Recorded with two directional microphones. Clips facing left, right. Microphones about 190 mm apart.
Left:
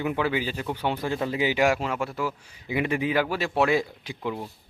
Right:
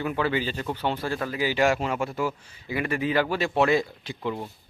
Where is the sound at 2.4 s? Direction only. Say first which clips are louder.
Left 2 dB; 15° left (ahead or behind).